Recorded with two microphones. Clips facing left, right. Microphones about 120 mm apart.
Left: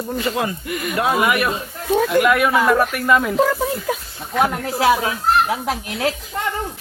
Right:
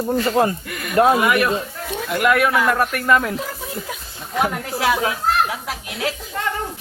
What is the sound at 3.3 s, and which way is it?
Speech, 90° left.